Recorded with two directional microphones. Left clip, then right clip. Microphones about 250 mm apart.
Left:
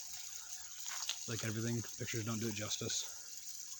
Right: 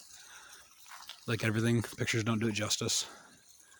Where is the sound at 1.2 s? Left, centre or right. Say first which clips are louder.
Right 9 dB; right.